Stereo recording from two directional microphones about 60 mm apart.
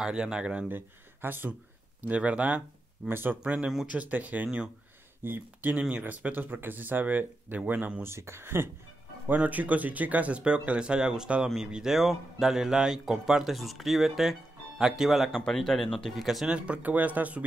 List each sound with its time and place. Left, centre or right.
0.0 s speech: centre
0.7 s speech: right
2.0 s speech: right
3.1 s speech: right
8.0 s speech: right
9.3 s a man's voice: right; by 16.3 s centre
16.4 s speech: centre